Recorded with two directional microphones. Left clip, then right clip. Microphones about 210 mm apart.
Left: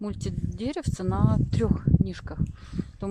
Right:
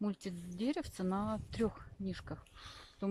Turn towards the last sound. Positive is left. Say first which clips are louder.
# left 7 dB
turn(degrees=25)  # may be behind; listen again after turning